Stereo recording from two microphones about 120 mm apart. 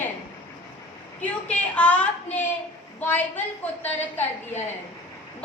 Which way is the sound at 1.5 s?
10° left (ahead or behind).